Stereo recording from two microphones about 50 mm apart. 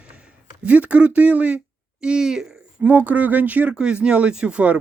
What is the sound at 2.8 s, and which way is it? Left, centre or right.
Speech, right.